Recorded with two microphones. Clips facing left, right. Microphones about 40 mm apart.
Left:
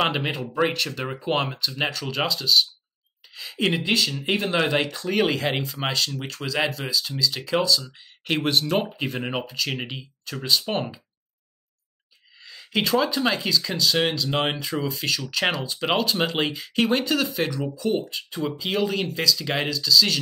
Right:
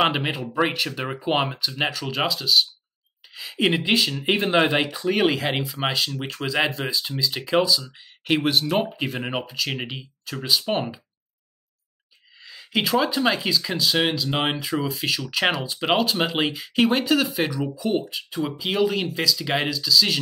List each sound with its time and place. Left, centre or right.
0.0 s speech: centre
12.4 s speech: centre